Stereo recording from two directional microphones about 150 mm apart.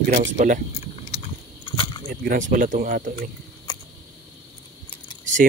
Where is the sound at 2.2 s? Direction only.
60° right (ahead or behind).